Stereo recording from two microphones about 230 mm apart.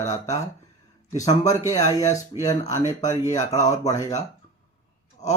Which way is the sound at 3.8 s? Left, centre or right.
Centre.